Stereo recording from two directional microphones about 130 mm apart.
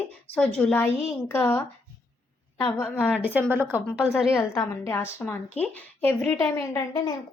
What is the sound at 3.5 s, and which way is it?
Speech, 15° right (ahead or behind).